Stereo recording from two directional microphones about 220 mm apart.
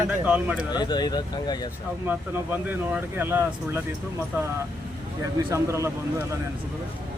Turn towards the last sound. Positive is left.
turn(degrees=-10)  # may be behind; listen again after turning